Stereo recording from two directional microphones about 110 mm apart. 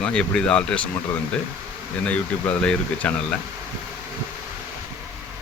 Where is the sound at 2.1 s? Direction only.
10° left (ahead or behind).